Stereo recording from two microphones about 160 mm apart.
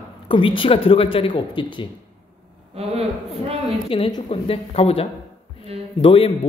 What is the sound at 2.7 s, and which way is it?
Speech, 40° right (ahead or behind).